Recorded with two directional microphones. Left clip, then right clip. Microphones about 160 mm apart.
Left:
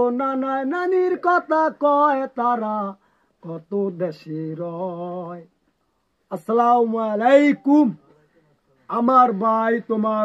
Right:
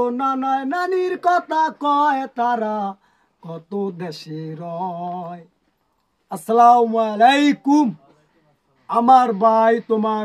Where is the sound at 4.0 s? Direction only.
15° right (ahead or behind).